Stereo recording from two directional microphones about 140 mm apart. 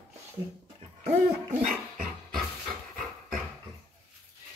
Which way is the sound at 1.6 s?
70° right (ahead or behind).